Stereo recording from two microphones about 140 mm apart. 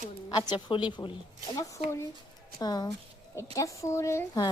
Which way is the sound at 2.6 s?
30° left (ahead or behind).